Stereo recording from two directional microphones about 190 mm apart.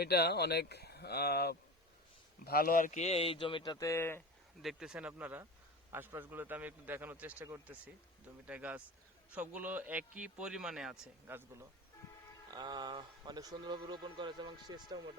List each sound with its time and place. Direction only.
0.0 s speech: 60° left (ahead or behind); by 4.2 s 10° left (ahead or behind)
4.6 s a man's voice: centre (ahead or behind)
12.5 s speech: 20° right (ahead or behind)